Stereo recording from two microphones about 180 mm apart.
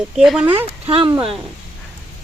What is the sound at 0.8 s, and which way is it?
Speech, 30° right (ahead or behind).